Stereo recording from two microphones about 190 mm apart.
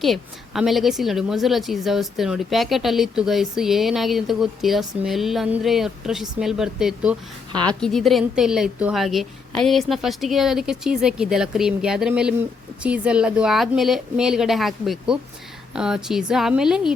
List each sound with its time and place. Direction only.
0.0 s a woman's voice: centre (ahead or behind)
7.5 s a woman's voice: 25° right (ahead or behind)
7.8 s a woman's voice: centre (ahead or behind)